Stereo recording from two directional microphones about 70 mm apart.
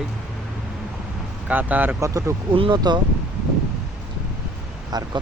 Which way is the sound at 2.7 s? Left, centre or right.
Right.